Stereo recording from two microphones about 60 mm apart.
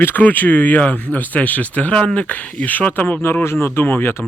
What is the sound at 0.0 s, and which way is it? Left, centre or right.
Speech, left.